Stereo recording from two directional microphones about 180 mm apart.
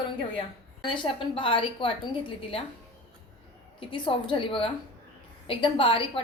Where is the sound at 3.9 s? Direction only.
30° left (ahead or behind).